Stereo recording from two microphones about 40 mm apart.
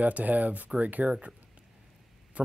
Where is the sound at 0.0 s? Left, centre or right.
Right.